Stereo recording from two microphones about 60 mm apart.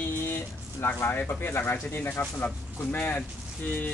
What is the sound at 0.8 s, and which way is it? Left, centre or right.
Speech, left.